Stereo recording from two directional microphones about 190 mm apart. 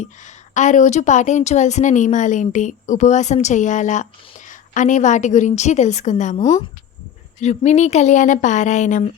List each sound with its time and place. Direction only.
0.0 s a woman's voice: 40° left (ahead or behind)
6.4 s speech: 20° left (ahead or behind)
7.3 s a woman's voice: 35° left (ahead or behind)